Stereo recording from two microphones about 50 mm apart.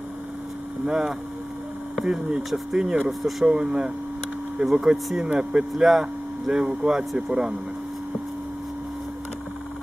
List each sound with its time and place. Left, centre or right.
0.8 s speech: centre
3.1 s speech: centre